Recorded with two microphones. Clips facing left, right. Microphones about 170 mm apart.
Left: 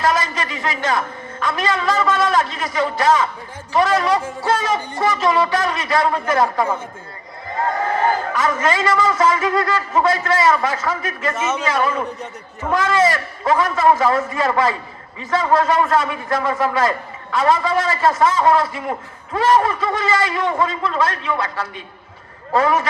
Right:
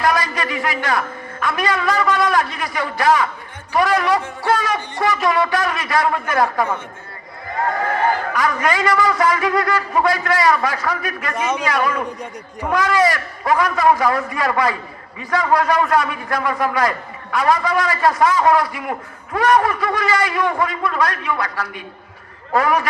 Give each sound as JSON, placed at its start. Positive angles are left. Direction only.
{"t": 0.0, "sound": "a man's voice", "side_deg": 25}
{"t": 7.5, "sound": "crowd", "side_deg": 20}
{"t": 8.3, "sound": "a man's voice", "side_deg": 25}
{"t": 11.3, "sound": "a man's voice", "side_deg": -15}
{"t": 11.6, "sound": "a man's voice", "side_deg": 25}